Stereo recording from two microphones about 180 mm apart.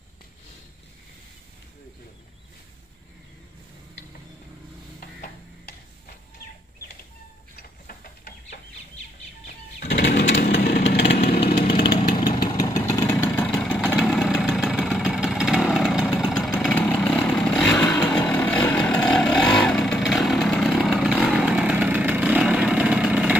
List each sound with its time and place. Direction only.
9.8 s lawn mower: 65° left (ahead or behind)
11.6 s chainsaw: 30° left (ahead or behind)
12.8 s vehicle: 15° left (ahead or behind)
13.9 s vehicle: centre (ahead or behind)
17.0 s chainsaw: 5° left (ahead or behind)
17.6 s vehicle: 20° left (ahead or behind); by 19.4 s centre (ahead or behind)
19.5 s chainsaw: centre (ahead or behind)